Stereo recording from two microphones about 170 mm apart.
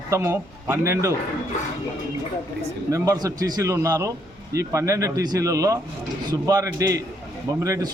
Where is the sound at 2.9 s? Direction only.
20° right (ahead or behind).